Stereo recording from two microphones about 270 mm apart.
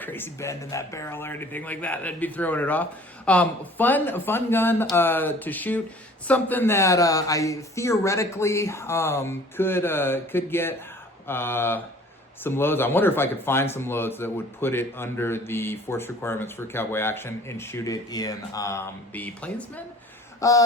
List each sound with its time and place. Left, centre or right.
0.0 s speech: centre